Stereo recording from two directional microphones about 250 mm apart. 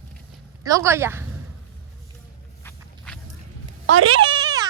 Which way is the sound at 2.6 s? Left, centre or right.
Centre.